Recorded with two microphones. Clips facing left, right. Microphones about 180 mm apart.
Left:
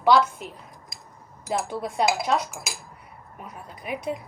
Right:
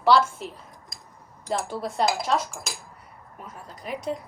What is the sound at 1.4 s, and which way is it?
A woman's voice, 5° left (ahead or behind).